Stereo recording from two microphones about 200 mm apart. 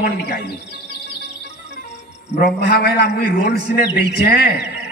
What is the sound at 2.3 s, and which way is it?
A man's voice, 50° left (ahead or behind).